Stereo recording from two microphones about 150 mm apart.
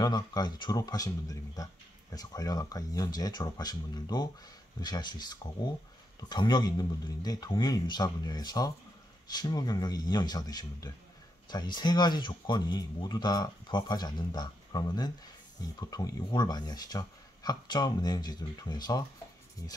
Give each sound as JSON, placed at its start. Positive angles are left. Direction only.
{"t": 0.0, "sound": "speech", "side_deg": 25}
{"t": 2.1, "sound": "speech", "side_deg": 25}